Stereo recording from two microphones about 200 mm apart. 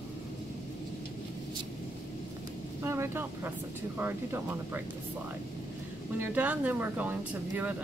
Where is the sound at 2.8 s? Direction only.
15° right (ahead or behind).